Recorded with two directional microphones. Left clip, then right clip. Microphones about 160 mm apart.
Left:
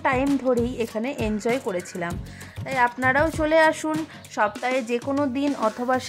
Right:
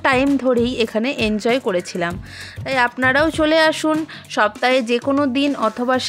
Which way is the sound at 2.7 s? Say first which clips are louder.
Right 4 dB; 30° right (ahead or behind).